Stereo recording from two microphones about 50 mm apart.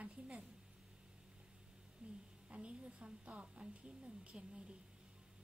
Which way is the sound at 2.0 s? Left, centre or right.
Right.